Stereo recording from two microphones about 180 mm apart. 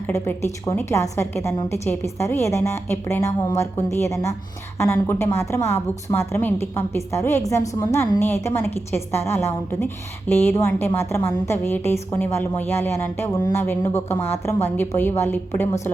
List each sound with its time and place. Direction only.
0.6 s a woman's voice: 15° left (ahead or behind)